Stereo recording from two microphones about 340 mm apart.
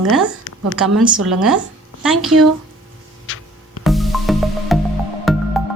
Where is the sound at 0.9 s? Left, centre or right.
Centre.